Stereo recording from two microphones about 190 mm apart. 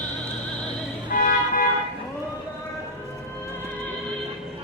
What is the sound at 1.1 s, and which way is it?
Music, 45° left (ahead or behind).